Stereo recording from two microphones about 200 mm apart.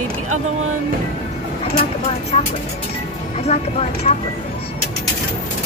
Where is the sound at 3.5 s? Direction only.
35° left (ahead or behind).